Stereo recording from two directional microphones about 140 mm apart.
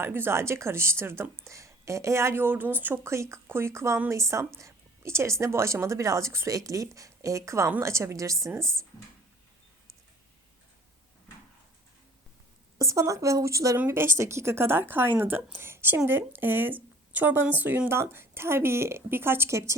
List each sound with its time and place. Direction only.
0.0 s speech: 15° right (ahead or behind)
8.6 s speech: 5° left (ahead or behind)
12.8 s speech: 20° right (ahead or behind)